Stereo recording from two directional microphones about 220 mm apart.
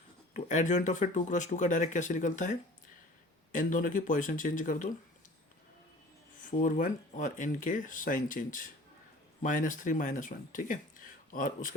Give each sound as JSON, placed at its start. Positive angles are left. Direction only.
{"t": 0.3, "sound": "speech", "side_deg": 35}
{"t": 6.6, "sound": "speech", "side_deg": 35}